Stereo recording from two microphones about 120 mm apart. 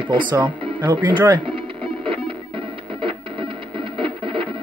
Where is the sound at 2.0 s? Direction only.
45° right (ahead or behind).